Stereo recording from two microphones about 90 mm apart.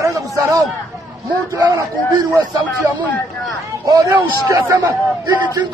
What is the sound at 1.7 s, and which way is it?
Speech, 40° right (ahead or behind).